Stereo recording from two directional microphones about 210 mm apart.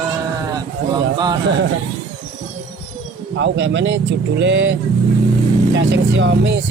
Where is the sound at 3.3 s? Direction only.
60° right (ahead or behind).